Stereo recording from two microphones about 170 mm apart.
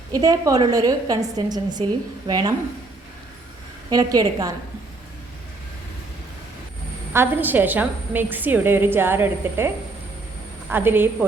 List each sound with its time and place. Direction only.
0.1 s a woman's voice: 20° right (ahead or behind)
3.8 s a woman's voice: 20° right (ahead or behind)
7.1 s a woman's voice: 10° right (ahead or behind)
10.7 s a woman's voice: 10° right (ahead or behind)